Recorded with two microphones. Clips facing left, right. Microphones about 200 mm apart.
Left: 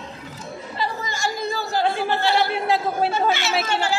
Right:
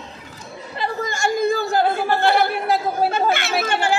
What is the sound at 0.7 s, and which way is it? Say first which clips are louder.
Chatter: right 4 dB; 55° right (ahead or behind).